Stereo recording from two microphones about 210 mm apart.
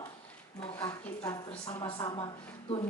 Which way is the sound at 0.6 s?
10° left (ahead or behind).